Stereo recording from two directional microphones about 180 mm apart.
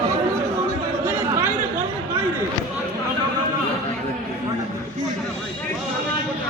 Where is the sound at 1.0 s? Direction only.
10° right (ahead or behind).